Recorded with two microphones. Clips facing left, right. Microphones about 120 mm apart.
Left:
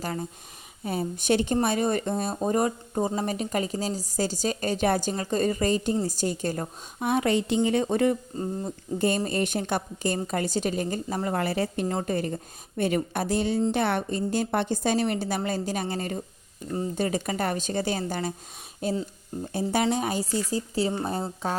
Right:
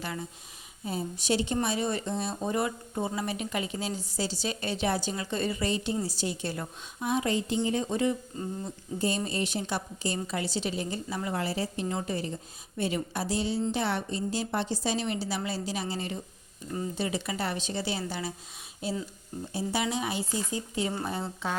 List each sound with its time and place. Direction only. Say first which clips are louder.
0.0 s speech: left 5 dB; 40° left (ahead or behind)
0.9 s a woman's voice: left 5 dB; 55° left (ahead or behind)
8.3 s speech: left 5 dB; 35° left (ahead or behind)
9.0 s speech: left 5 dB; 55° left (ahead or behind); by 21.5 s 40° left (ahead or behind)